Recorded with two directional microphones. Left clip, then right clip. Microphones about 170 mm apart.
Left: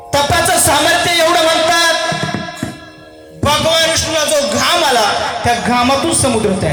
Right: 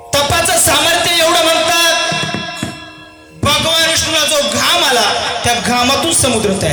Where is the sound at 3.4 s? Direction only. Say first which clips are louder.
Even; 15° right (ahead or behind).